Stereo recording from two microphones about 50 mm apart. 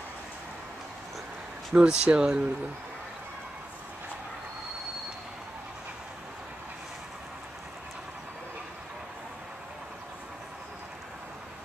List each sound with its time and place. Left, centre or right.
1.7 s speech: right